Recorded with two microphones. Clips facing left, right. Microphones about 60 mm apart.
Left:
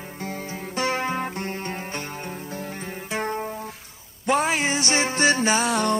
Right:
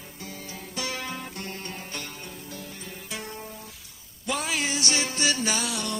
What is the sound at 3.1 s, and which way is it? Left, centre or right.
Music, left.